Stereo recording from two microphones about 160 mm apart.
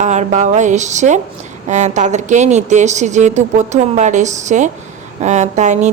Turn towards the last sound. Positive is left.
turn(degrees=-45)  # may be behind; listen again after turning